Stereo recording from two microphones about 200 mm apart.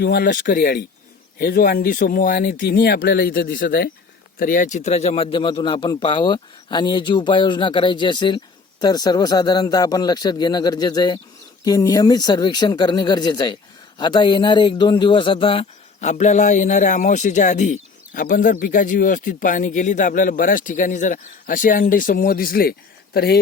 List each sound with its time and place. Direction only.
0.0 s a man's voice: 50° left (ahead or behind)